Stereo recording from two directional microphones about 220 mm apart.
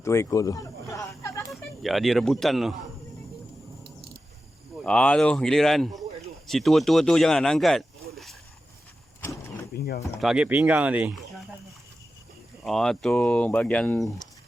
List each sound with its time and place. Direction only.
0.0 s a sound: 15° left (ahead or behind)
1.5 s speech: centre (ahead or behind)
4.8 s speech: 5° left (ahead or behind)
9.7 s a sound: 45° left (ahead or behind)
10.2 s speech: 5° right (ahead or behind)
12.6 s speech: centre (ahead or behind)